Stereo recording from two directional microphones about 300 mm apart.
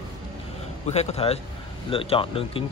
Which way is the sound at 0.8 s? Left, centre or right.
Left.